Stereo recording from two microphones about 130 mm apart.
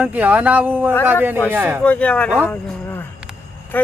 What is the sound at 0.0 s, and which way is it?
Speech, 10° right (ahead or behind).